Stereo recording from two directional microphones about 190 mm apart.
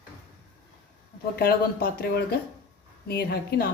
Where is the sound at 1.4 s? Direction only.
50° left (ahead or behind).